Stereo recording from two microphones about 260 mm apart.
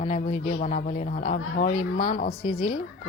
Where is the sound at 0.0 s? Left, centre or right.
Left.